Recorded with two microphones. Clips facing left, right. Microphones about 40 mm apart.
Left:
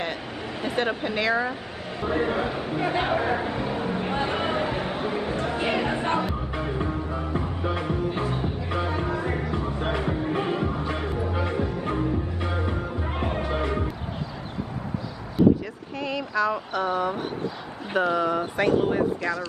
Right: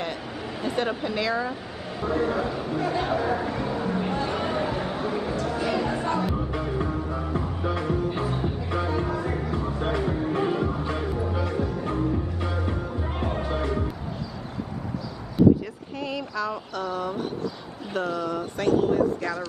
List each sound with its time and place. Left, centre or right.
0.7 s speech: centre
2.0 s speech: left
4.1 s a sound: left
6.7 s music: centre
16.0 s speech: centre; by 19.0 s left